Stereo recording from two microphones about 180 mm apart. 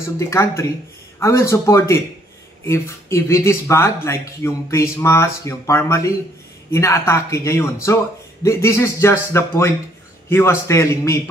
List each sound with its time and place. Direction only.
0.2 s speech: 15° left (ahead or behind)